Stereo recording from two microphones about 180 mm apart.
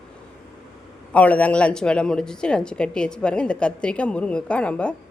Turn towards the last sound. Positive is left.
turn(degrees=5)  # may be behind; listen again after turning